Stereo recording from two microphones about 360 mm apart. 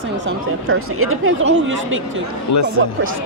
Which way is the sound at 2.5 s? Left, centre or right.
Left.